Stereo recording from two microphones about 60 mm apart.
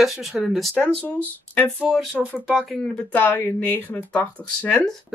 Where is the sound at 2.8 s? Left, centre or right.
Left.